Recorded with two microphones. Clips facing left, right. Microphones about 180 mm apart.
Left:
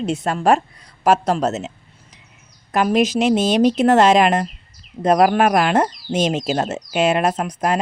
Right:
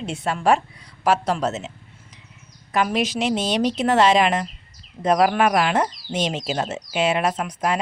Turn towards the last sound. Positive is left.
turn(degrees=45)  # may be behind; listen again after turning